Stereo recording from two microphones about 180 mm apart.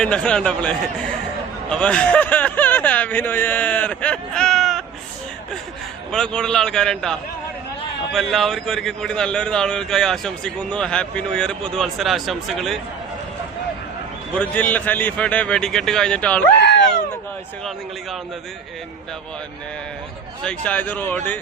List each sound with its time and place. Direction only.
0.0 s speech: 5° left (ahead or behind)
6.1 s speech: 5° left (ahead or behind)
14.3 s speech: 10° left (ahead or behind)
16.6 s a sound: 70° left (ahead or behind)
20.4 s speech: 5° left (ahead or behind)